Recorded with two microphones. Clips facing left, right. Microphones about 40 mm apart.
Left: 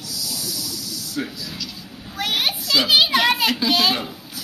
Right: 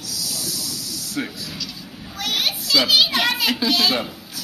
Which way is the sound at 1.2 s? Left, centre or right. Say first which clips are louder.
Right 1 dB; right.